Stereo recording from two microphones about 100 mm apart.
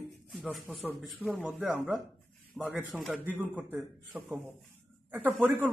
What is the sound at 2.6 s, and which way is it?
Speech, 10° right (ahead or behind).